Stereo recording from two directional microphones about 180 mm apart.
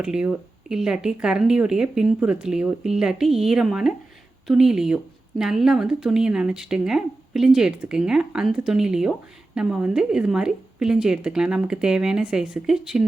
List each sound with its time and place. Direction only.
0.0 s speech: 5° right (ahead or behind)